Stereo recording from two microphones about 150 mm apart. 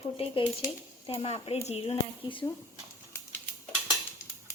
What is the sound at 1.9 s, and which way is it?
Speech, 35° left (ahead or behind).